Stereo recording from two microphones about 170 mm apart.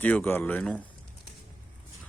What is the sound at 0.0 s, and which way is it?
Speech, 10° left (ahead or behind).